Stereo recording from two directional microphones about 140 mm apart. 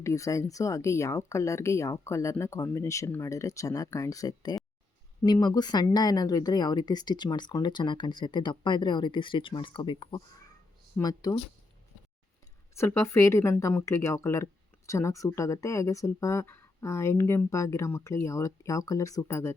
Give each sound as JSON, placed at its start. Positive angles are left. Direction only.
{"t": 0.0, "sound": "speech", "side_deg": 20}
{"t": 12.7, "sound": "speech", "side_deg": 20}